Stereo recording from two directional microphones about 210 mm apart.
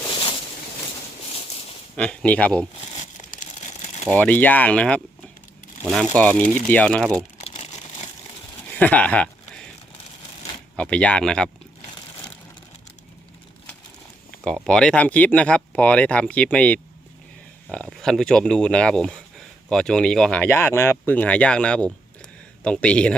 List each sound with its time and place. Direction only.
0.1 s a sound: 25° left (ahead or behind)
2.0 s speech: 5° left (ahead or behind)
2.9 s crumpling: 35° left (ahead or behind)
4.1 s speech: 10° left (ahead or behind)
6.1 s speech: 5° left (ahead or behind)
7.4 s crumpling: 30° left (ahead or behind)
8.7 s speech: 5° left (ahead or behind)
10.8 s speech: 5° left (ahead or behind)
14.3 s speech: 5° left (ahead or behind)